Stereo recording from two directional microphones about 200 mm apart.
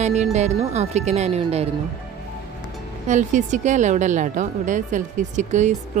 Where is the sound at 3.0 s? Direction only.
40° right (ahead or behind).